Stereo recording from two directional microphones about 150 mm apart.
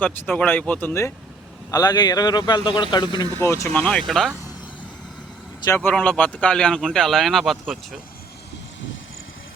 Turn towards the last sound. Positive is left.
turn(degrees=0)  # may be behind; listen again after turning